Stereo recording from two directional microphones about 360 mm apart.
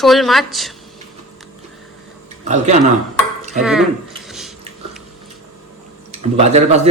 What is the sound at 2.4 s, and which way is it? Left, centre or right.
Speech, centre.